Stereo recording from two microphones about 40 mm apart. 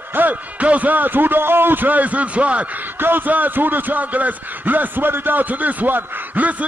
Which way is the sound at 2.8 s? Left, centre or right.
Right.